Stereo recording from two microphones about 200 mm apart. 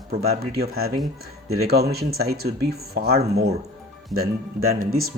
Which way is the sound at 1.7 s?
50° right (ahead or behind).